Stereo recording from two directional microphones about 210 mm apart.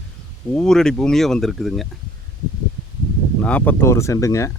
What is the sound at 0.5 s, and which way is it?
Speech, 5° left (ahead or behind).